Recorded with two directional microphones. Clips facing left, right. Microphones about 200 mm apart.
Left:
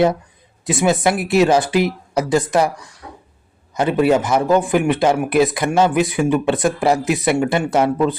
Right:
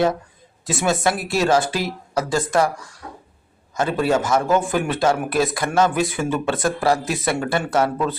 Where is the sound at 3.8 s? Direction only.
20° left (ahead or behind).